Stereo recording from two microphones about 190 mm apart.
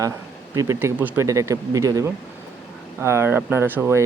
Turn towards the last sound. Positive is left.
turn(degrees=-15)  # may be behind; listen again after turning